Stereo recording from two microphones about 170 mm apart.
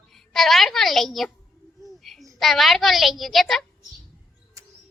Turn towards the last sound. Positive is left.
turn(degrees=0)  # may be behind; listen again after turning